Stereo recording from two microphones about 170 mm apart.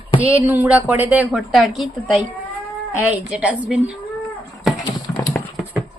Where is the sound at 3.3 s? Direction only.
5° right (ahead or behind).